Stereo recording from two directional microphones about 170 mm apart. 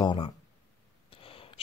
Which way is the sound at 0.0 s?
30° left (ahead or behind).